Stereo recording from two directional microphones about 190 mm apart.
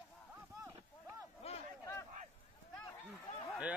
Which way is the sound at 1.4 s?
30° left (ahead or behind).